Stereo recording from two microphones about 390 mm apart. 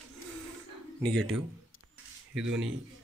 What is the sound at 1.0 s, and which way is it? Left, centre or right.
Speech, centre.